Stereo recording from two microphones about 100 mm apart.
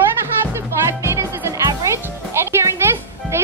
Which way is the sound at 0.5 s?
25° right (ahead or behind).